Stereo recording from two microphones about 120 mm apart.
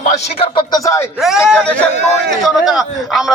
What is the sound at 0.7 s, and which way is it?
Speech, 30° left (ahead or behind).